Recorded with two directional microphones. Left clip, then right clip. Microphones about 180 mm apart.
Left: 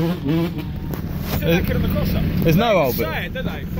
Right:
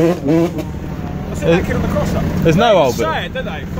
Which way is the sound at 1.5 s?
15° right (ahead or behind).